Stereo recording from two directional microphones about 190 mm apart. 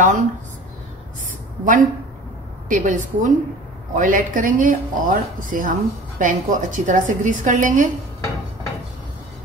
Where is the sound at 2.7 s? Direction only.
40° right (ahead or behind).